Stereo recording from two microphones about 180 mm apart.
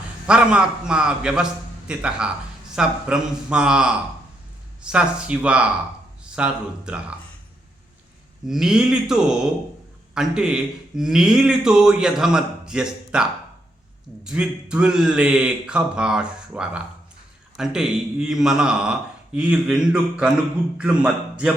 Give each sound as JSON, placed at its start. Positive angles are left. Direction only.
{"t": 0.3, "sound": "speech", "side_deg": -5}
{"t": 8.4, "sound": "speech", "side_deg": 0}
{"t": 14.3, "sound": "speech", "side_deg": -5}